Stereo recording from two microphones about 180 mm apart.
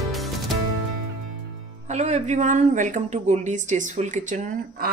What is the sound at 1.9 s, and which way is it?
A woman's voice, 40° right (ahead or behind).